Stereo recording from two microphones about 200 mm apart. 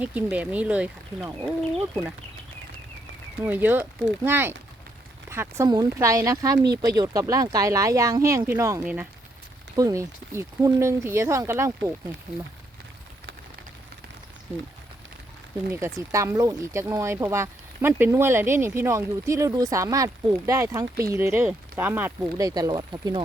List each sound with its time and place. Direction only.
0.0 s speech: 5° right (ahead or behind)
3.4 s speech: 10° right (ahead or behind)
15.7 s speech: 15° right (ahead or behind)